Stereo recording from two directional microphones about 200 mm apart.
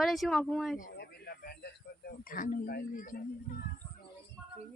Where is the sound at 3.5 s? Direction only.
45° left (ahead or behind).